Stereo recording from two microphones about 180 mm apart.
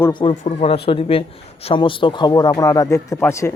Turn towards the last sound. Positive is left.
turn(degrees=15)  # may be behind; listen again after turning